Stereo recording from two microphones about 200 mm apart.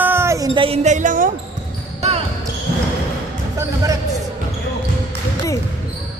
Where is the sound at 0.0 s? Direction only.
10° right (ahead or behind).